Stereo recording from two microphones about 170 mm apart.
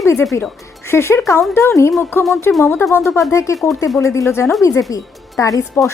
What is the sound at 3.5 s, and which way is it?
Speech, centre (ahead or behind).